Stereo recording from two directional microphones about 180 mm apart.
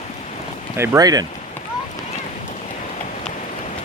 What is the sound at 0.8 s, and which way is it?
Speech, 20° right (ahead or behind).